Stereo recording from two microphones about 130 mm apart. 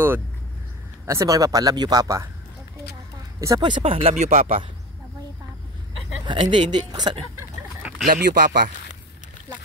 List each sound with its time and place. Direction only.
1.0 s speech: 25° right (ahead or behind)
3.3 s speech: 25° right (ahead or behind); by 4.1 s 50° right (ahead or behind)
4.1 s speech: 60° right (ahead or behind)
6.2 s speech: 40° right (ahead or behind)
8.1 s speech: 90° right